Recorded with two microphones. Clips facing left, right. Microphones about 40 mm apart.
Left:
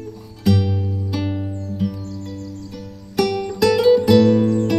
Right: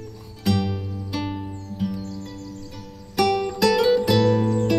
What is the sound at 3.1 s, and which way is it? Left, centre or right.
Music, centre.